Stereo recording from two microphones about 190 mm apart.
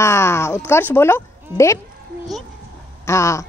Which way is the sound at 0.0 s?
15° left (ahead or behind).